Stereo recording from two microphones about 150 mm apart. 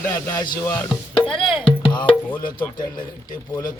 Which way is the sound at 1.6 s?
35° left (ahead or behind).